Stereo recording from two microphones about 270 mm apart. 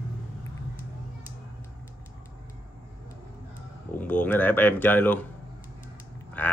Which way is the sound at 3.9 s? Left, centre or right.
Centre.